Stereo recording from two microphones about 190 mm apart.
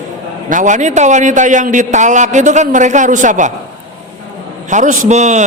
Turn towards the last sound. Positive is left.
turn(degrees=-40)  # may be behind; listen again after turning